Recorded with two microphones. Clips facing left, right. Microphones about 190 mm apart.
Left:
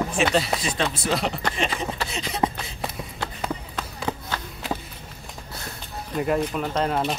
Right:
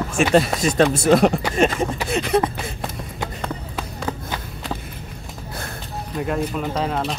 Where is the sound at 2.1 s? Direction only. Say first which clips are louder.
Right 12 dB; 60° right (ahead or behind).